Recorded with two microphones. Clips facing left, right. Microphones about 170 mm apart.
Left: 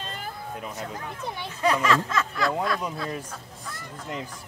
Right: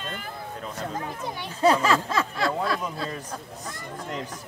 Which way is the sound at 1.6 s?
30° right (ahead or behind).